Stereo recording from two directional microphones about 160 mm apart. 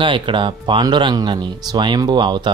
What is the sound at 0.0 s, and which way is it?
Speech, 30° right (ahead or behind).